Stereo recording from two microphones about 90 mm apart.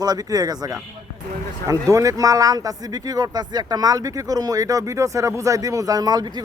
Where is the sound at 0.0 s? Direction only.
45° right (ahead or behind).